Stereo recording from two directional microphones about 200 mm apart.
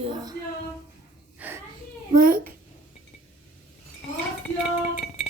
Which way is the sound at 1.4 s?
10° right (ahead or behind).